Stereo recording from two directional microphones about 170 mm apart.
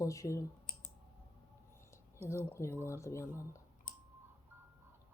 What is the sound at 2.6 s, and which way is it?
Speech, 15° right (ahead or behind).